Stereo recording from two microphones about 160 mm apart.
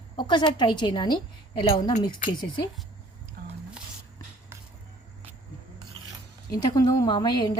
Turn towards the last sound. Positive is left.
turn(degrees=25)  # may be behind; listen again after turning